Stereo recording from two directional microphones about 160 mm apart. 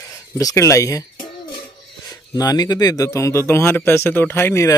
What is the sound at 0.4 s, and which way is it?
Speech, 20° left (ahead or behind).